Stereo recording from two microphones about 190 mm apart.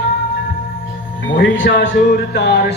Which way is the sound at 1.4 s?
60° left (ahead or behind).